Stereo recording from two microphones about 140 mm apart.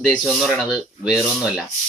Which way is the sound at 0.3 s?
Centre (ahead or behind).